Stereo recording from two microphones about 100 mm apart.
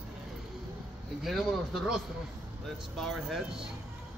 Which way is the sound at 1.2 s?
Centre (ahead or behind).